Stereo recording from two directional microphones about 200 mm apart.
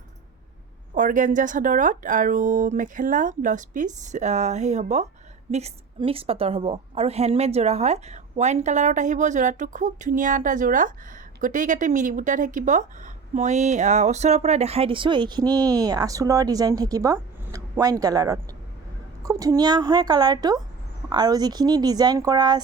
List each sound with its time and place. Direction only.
0.9 s a man's voice: 40° right (ahead or behind); by 22.6 s 20° right (ahead or behind)